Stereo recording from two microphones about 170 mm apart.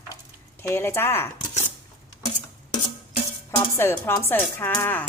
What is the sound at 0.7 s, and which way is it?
Speech, 15° left (ahead or behind).